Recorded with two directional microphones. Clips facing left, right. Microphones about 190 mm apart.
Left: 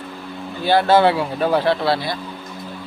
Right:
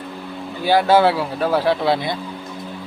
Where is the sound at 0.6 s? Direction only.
10° right (ahead or behind).